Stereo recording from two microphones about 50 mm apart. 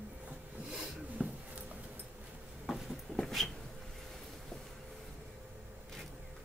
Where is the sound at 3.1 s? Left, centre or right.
Centre.